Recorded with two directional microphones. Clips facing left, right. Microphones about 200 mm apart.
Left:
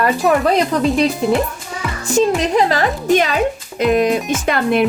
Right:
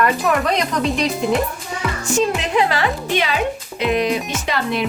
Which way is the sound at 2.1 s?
40° left (ahead or behind).